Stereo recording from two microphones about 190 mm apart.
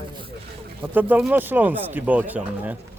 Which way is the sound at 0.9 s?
10° right (ahead or behind).